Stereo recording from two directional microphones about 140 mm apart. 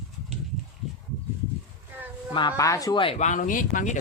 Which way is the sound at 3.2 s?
65° left (ahead or behind).